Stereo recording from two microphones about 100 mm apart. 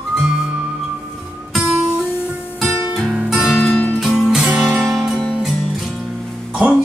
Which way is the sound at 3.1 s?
5° right (ahead or behind).